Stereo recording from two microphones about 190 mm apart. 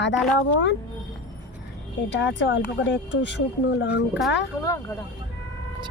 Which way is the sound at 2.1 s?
70° left (ahead or behind).